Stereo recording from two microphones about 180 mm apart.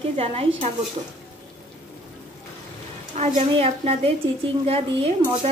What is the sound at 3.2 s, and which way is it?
Speech, 35° right (ahead or behind).